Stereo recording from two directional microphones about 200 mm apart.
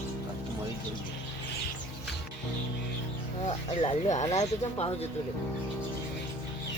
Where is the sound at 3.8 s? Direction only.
35° left (ahead or behind).